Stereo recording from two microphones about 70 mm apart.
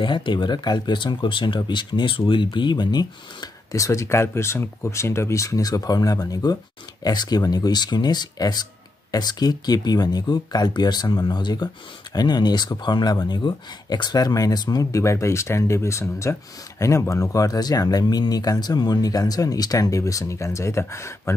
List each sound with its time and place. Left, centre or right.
0.4 s speech: left
3.7 s speech: left